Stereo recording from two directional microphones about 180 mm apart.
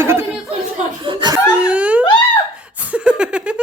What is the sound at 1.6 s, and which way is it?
Speech, 5° right (ahead or behind).